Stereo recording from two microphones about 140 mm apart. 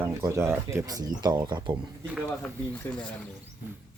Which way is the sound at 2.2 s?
15° left (ahead or behind).